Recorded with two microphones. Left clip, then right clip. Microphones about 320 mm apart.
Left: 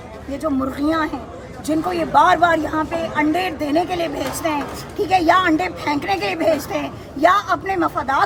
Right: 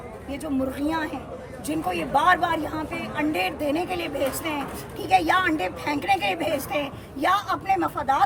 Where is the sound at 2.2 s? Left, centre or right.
Centre.